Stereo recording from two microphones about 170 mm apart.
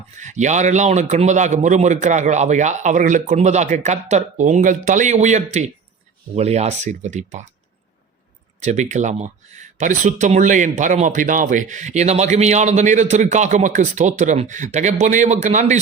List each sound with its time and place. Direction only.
0.2 s speech: 45° right (ahead or behind)
8.6 s speech: 45° right (ahead or behind)